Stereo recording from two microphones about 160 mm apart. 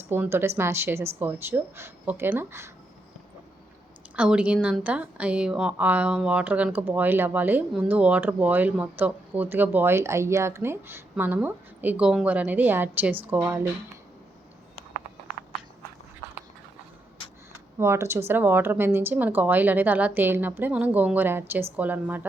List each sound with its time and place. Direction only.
0.1 s speech: 15° right (ahead or behind)
4.1 s speech: 5° right (ahead or behind)
17.7 s speech: 15° right (ahead or behind)